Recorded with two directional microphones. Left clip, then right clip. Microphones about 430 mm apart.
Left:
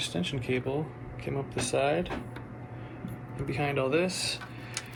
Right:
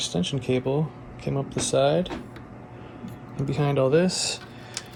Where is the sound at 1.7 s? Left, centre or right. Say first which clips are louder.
Right 6 dB; right.